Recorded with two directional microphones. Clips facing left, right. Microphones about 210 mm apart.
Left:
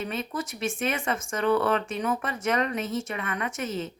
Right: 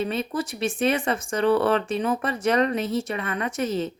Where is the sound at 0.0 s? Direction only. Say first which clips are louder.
Right 5 dB; 35° right (ahead or behind).